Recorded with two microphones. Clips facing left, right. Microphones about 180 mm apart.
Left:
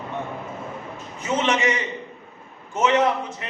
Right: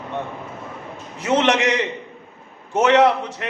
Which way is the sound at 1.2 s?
75° right (ahead or behind).